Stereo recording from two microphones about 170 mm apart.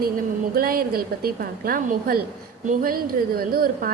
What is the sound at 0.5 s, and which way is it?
A woman's voice, 60° right (ahead or behind).